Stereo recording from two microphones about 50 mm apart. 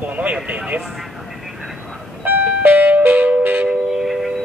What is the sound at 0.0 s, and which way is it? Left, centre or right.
Speech, right.